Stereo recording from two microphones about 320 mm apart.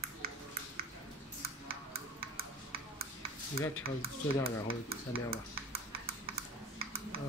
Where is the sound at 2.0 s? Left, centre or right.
Right.